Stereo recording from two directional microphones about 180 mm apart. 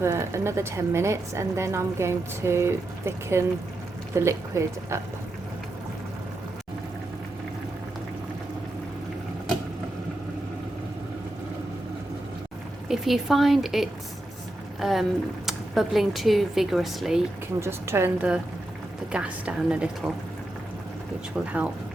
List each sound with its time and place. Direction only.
0.0 s a woman's voice: 15° right (ahead or behind)
12.9 s speech: centre (ahead or behind)
17.6 s a woman's voice: 15° right (ahead or behind)
21.4 s speech: 5° right (ahead or behind)